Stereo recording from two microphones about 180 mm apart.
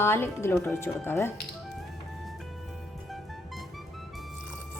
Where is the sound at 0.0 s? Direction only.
15° left (ahead or behind).